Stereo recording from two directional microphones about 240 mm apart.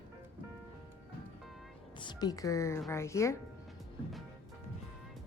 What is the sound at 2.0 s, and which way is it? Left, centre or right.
Speech, centre.